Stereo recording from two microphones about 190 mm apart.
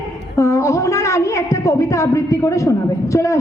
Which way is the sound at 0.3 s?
15° left (ahead or behind).